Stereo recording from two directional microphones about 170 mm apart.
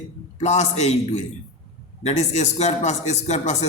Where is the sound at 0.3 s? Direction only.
40° left (ahead or behind).